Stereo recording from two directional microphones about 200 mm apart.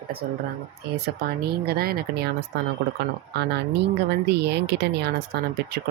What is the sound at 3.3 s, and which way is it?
A woman's voice, 55° right (ahead or behind).